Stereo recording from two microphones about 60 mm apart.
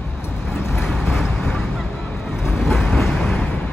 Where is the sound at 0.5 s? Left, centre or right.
Left.